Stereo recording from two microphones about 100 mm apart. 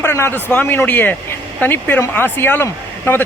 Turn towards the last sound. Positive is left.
turn(degrees=20)  # may be behind; listen again after turning